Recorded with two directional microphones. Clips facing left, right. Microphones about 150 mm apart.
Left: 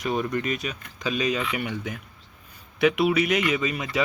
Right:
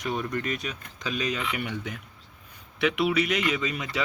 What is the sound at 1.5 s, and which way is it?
Speech, 45° left (ahead or behind).